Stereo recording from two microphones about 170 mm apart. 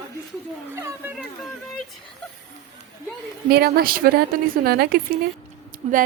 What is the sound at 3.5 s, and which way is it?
A woman's voice, 65° right (ahead or behind).